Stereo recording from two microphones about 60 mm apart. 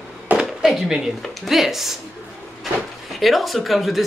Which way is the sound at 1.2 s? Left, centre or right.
Centre.